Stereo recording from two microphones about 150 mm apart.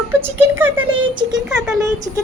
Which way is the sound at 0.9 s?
30° right (ahead or behind).